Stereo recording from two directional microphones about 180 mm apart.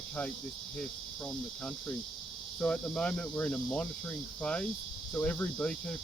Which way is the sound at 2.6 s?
5° left (ahead or behind).